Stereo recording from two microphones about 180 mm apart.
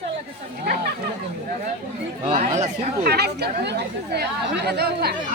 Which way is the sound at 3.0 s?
65° right (ahead or behind).